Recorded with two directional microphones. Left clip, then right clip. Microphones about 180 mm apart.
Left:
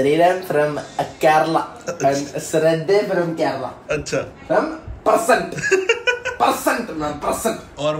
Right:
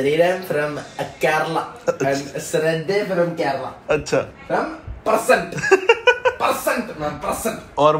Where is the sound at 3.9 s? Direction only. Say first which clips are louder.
Right 4 dB; centre (ahead or behind).